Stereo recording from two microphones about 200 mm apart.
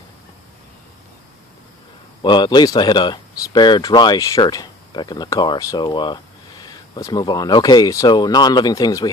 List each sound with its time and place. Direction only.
2.2 s speech: 20° left (ahead or behind)